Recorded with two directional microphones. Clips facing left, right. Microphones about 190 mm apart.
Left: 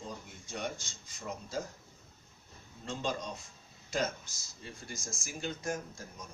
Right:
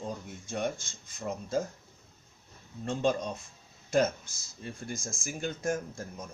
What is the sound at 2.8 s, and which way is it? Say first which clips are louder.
Speech: right 7 dB; 55° right (ahead or behind).